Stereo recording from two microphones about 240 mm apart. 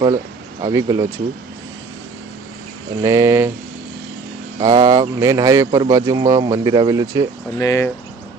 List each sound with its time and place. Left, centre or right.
0.6 s speech: centre
3.0 s speech: centre
4.6 s speech: centre
7.6 s speech: centre